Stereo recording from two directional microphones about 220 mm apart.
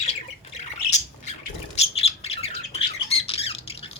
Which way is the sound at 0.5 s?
30° left (ahead or behind).